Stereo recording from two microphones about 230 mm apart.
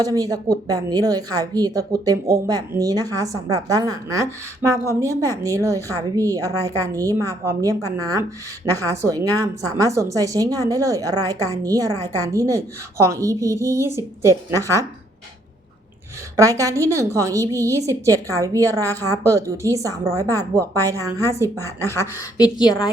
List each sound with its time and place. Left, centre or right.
0.0 s a woman's voice: centre
16.4 s a woman's voice: centre
21.8 s a woman's voice: centre